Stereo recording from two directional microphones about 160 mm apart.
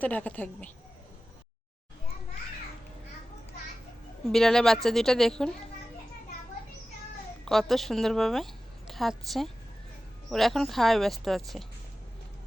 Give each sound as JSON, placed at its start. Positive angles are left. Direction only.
{"t": 0.0, "sound": "a woman's voice", "side_deg": 10}
{"t": 4.3, "sound": "speech", "side_deg": 0}
{"t": 7.4, "sound": "a woman's voice", "side_deg": 0}